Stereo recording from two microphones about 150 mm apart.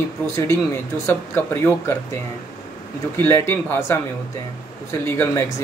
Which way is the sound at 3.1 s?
15° left (ahead or behind).